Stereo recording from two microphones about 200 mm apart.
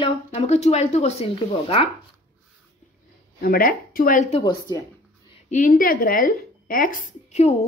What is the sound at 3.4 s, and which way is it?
Speech, 45° left (ahead or behind).